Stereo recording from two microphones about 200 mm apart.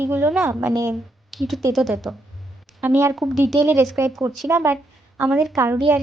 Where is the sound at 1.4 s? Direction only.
Centre (ahead or behind).